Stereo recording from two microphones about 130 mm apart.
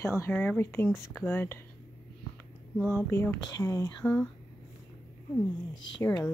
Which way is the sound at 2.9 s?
20° left (ahead or behind).